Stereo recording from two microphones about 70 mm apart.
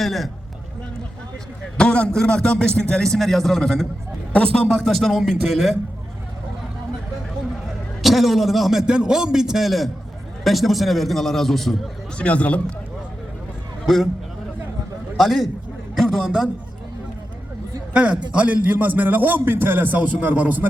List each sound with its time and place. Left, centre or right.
0.0 s a man's voice: centre
1.8 s a man's voice: centre
4.7 s a man's voice: centre
8.0 s a man's voice: centre
12.1 s a man's voice: centre
13.8 s a man's voice: centre
15.2 s a man's voice: centre
17.9 s a man's voice: centre